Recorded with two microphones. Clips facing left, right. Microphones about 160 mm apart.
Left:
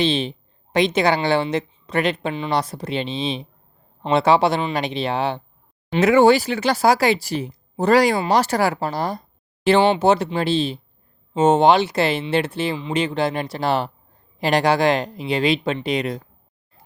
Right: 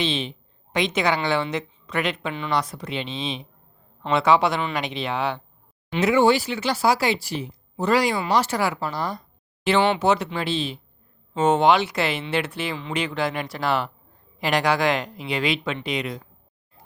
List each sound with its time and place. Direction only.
0.0 s speech: 35° left (ahead or behind)
6.1 s speech: 45° left (ahead or behind)